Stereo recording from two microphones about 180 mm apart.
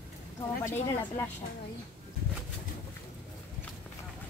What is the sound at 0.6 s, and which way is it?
Speech, 15° left (ahead or behind).